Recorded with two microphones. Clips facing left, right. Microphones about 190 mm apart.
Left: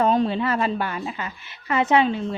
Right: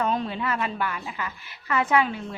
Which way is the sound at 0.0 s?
35° left (ahead or behind).